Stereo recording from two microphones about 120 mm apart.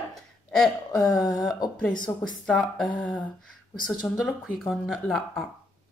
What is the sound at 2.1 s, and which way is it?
Speech, 35° left (ahead or behind).